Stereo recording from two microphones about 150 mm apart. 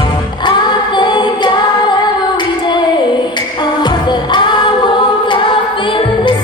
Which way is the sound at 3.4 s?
30° left (ahead or behind).